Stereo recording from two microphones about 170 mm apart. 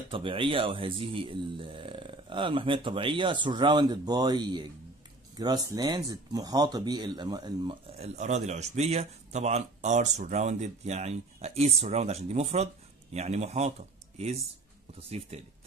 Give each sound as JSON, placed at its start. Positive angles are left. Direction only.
{"t": 0.1, "sound": "speech", "side_deg": -30}
{"t": 8.0, "sound": "speech", "side_deg": -40}